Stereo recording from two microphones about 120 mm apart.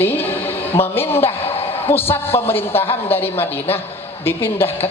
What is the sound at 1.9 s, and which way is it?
A man's voice, 20° left (ahead or behind).